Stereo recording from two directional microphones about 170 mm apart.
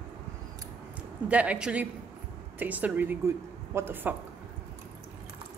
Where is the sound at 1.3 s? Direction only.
10° right (ahead or behind).